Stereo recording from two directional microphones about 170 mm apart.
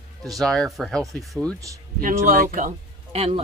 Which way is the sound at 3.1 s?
35° right (ahead or behind).